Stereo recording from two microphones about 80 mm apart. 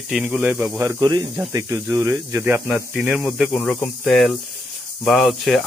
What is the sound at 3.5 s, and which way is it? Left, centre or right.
Speech, centre.